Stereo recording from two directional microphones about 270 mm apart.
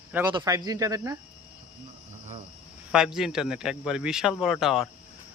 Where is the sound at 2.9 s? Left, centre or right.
Centre.